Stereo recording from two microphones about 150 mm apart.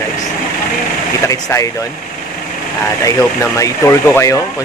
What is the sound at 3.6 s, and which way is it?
Speech, 20° left (ahead or behind).